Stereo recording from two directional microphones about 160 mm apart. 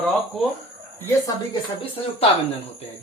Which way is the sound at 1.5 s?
35° left (ahead or behind).